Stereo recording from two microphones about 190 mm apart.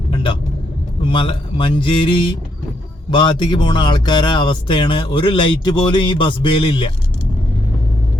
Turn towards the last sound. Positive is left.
turn(degrees=30)  # may be behind; listen again after turning